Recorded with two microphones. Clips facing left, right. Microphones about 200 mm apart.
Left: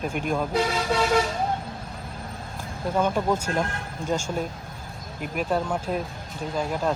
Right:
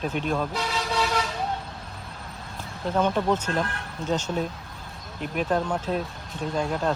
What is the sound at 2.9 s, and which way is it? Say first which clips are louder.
Speech: even; 10° left (ahead or behind).